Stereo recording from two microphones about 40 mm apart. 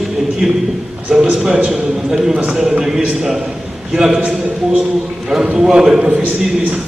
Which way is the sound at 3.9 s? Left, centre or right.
Centre.